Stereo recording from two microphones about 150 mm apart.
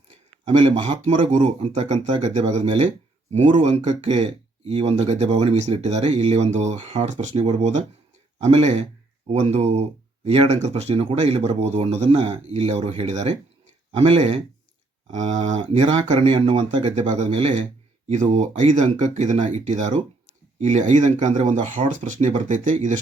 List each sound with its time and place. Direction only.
0.4 s speech: 45° right (ahead or behind)
16.1 s speech: 35° right (ahead or behind)
16.8 s speech: 50° right (ahead or behind)